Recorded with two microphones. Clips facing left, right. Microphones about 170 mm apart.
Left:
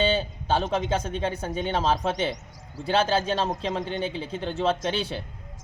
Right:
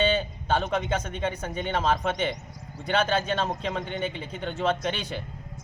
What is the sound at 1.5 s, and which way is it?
Speech, centre (ahead or behind).